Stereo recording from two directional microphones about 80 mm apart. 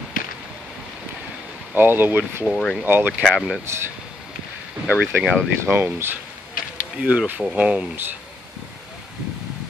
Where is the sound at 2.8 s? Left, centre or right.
Right.